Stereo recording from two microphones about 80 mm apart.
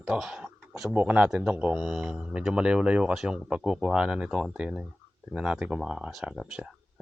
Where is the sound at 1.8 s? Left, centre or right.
Centre.